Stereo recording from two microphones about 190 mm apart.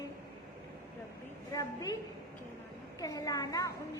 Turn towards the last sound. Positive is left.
turn(degrees=20)  # may be behind; listen again after turning